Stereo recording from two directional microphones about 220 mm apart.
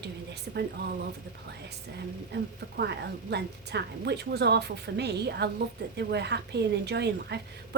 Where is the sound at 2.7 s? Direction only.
50° right (ahead or behind).